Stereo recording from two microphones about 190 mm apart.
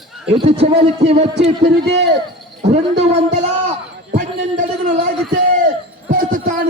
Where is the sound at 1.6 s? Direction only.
60° right (ahead or behind).